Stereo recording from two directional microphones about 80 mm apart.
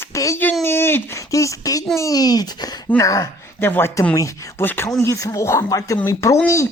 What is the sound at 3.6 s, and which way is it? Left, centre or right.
Speech, left.